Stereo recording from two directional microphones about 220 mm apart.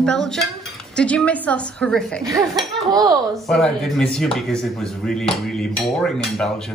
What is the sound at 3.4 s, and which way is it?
Speech, 5° left (ahead or behind).